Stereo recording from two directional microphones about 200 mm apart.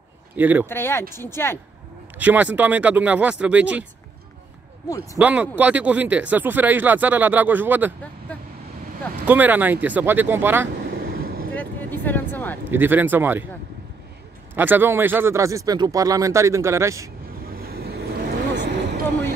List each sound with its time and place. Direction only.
0.4 s speech: 10° right (ahead or behind)
0.7 s speech: 10° left (ahead or behind)
2.1 s speech: 10° right (ahead or behind)
4.8 s speech: 15° left (ahead or behind)
5.2 s speech: 5° right (ahead or behind)
9.2 s speech: 10° right (ahead or behind)
10.9 s vehicle: 50° right (ahead or behind)
11.5 s a sound: 10° left (ahead or behind)
12.7 s speech: 10° right (ahead or behind)
14.5 s speech: 10° right (ahead or behind)
17.6 s vehicle: 50° right (ahead or behind)